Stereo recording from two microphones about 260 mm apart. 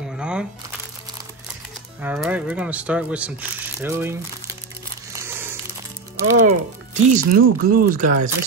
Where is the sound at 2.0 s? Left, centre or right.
Centre.